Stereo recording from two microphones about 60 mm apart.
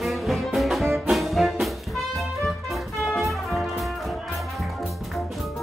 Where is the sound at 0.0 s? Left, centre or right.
Centre.